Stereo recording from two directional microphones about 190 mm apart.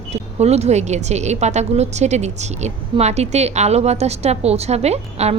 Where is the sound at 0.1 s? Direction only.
35° right (ahead or behind).